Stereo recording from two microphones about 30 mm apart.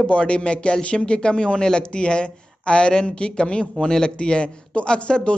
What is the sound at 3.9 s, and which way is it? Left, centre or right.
Speech, left.